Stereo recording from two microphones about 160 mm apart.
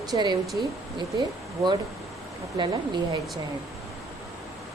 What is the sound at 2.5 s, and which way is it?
Speech, 30° right (ahead or behind).